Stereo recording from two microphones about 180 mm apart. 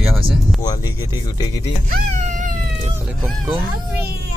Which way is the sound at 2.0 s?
40° right (ahead or behind).